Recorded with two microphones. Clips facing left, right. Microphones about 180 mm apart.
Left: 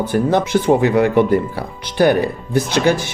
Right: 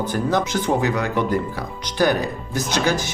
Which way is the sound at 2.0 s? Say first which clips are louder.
Left 5 dB; 55° left (ahead or behind).